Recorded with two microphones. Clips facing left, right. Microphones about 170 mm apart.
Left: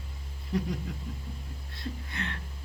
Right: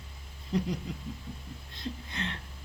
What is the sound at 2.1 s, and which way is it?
Music, 25° right (ahead or behind).